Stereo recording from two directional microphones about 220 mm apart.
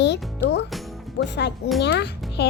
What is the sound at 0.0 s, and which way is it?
Music, 50° left (ahead or behind).